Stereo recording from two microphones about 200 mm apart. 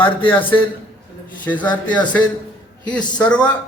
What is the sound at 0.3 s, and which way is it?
Speech, 10° left (ahead or behind).